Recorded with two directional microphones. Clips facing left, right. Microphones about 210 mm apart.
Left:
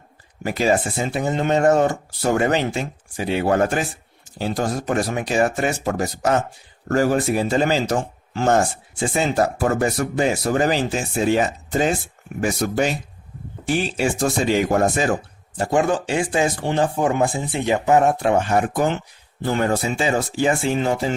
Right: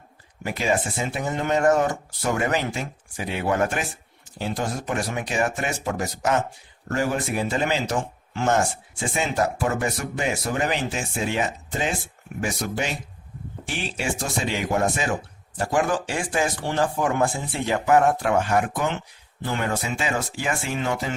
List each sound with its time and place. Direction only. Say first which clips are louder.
0.4 s speech: left 5 dB; 35° left (ahead or behind)
15.5 s speech: left 4 dB; 25° left (ahead or behind)
19.4 s speech: left 6 dB; 35° left (ahead or behind)